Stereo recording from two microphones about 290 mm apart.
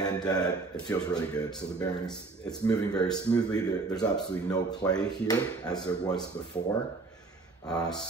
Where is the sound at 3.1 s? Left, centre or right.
Centre.